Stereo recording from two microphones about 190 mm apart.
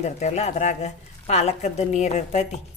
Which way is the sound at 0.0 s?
35° left (ahead or behind).